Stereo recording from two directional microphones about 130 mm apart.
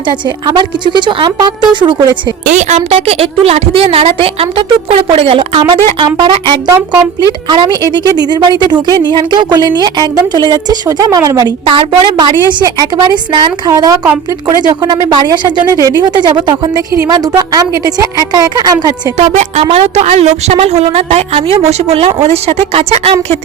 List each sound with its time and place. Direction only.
0.1 s a woman's voice: 35° right (ahead or behind)
2.5 s a woman's voice: 65° right (ahead or behind); by 6.6 s 35° right (ahead or behind)
6.7 s a woman's voice: 20° right (ahead or behind)
7.4 s a woman's voice: 35° right (ahead or behind)
19.1 s a woman's voice: 65° right (ahead or behind)